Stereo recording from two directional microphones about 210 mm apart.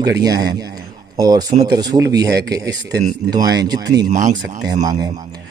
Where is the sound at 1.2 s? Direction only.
20° right (ahead or behind).